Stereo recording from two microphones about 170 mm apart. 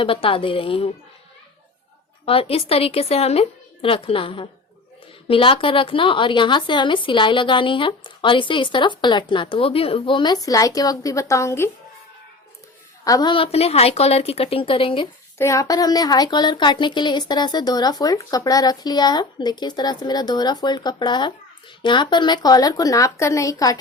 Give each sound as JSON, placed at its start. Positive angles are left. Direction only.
{"t": 0.0, "sound": "a woman's voice", "side_deg": 30}
{"t": 2.2, "sound": "a woman's voice", "side_deg": 35}
{"t": 13.1, "sound": "a woman's voice", "side_deg": 25}
{"t": 15.4, "sound": "a woman's voice", "side_deg": 20}